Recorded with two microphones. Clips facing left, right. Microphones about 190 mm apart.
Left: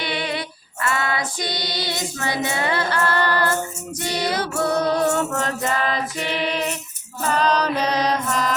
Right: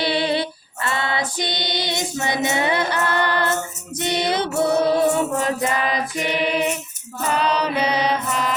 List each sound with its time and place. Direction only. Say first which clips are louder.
0.0 s female singing: right 6 dB; 30° right (ahead or behind)
4.0 s music: right 2 dB; 20° right (ahead or behind)
5.1 s music: right 2 dB; 10° right (ahead or behind)
5.8 s child singing: right 1 dB; 10° right (ahead or behind)
7.3 s music: left 1 dB; 10° right (ahead or behind)